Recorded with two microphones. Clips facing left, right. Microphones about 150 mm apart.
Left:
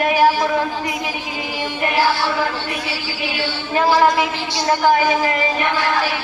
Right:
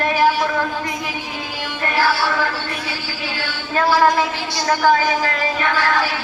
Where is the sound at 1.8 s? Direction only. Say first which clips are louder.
Left 1 dB; 15° left (ahead or behind).